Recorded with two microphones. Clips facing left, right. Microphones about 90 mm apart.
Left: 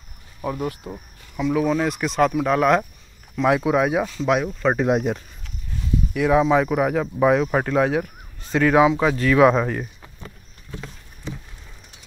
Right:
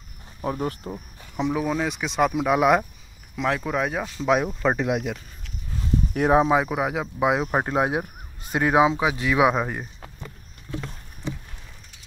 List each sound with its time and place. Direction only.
0.4 s speech: 30° right (ahead or behind)
1.3 s speech: 20° right (ahead or behind)
1.7 s speech: centre (ahead or behind)
3.4 s speech: 10° left (ahead or behind)
4.8 s speech: 35° left (ahead or behind)
6.1 s speech: 40° right (ahead or behind)
6.4 s speech: 15° right (ahead or behind)
7.5 s speech: 25° right (ahead or behind)